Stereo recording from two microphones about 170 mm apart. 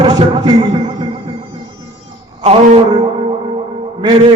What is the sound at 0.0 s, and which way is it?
Speech, 30° right (ahead or behind).